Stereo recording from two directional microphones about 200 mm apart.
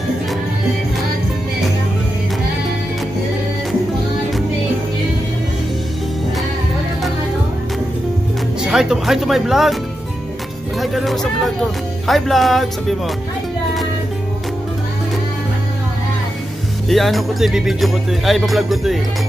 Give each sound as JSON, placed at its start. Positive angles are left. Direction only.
{"t": 8.6, "sound": "speech", "side_deg": -5}
{"t": 10.8, "sound": "speech", "side_deg": 0}
{"t": 16.9, "sound": "speech", "side_deg": 0}